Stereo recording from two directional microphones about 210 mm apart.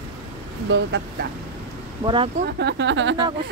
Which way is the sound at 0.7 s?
60° right (ahead or behind).